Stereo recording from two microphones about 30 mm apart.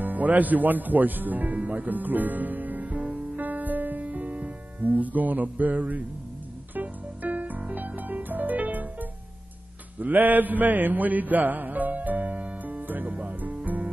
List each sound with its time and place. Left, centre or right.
0.0 s a man's voice: right
1.5 s speech: right
3.2 s music: right
4.0 s music: right
4.7 s speech: right
6.7 s music: right
7.7 s music: right
9.9 s mantra: right